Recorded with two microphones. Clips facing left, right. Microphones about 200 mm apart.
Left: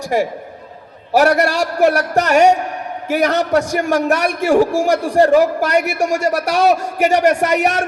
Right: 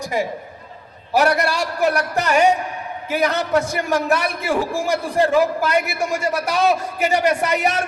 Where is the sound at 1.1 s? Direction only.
45° left (ahead or behind).